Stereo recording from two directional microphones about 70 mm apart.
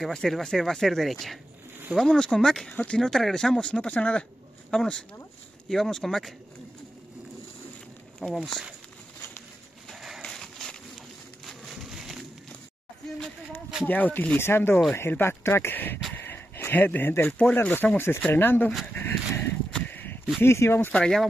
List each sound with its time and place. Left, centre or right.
0.0 s speech: centre
3.1 s speech: centre
8.2 s speech: centre
9.8 s a sound: centre
13.8 s speech: left
16.2 s a sound: left
17.3 s speech: centre
17.6 s speech: left
18.9 s a sound: left
20.4 s speech: left
20.9 s speech: centre